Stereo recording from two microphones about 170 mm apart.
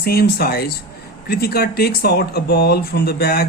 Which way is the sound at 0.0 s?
65° left (ahead or behind).